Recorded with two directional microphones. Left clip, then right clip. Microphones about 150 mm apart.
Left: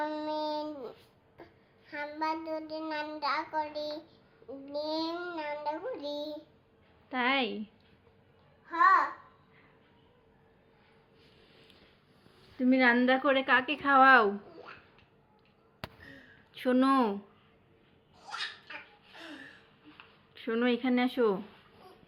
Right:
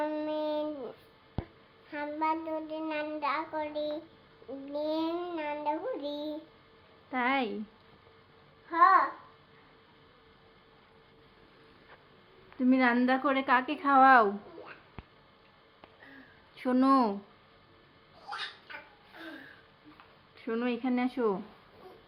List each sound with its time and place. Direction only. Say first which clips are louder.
0.0 s child singing: right 1 dB; 15° right (ahead or behind)
4.7 s babbling: right 2 dB; 15° right (ahead or behind)
5.0 s child singing: right 2 dB; 15° right (ahead or behind)
7.1 s a woman's voice: even; 15° left (ahead or behind)
8.7 s a child's voice: right 1 dB; 30° right (ahead or behind)
12.5 s a woman's voice: left 1 dB; 10° left (ahead or behind)
16.6 s a woman's voice: right 1 dB; 10° left (ahead or behind)
20.3 s speech: left 3 dB; 20° left (ahead or behind)